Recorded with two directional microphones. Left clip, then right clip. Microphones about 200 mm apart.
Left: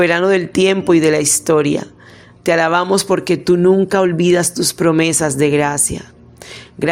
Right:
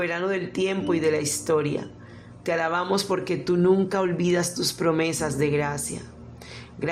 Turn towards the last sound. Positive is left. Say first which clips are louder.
# left 12 dB
turn(degrees=40)  # may be behind; listen again after turning